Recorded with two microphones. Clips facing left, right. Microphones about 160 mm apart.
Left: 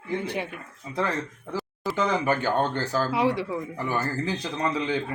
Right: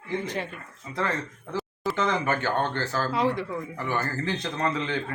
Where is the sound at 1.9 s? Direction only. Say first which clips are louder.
Left 2 dB; 10° left (ahead or behind).